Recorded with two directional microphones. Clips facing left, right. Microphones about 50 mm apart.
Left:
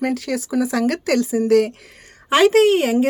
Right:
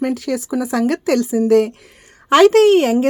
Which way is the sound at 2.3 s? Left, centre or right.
Right.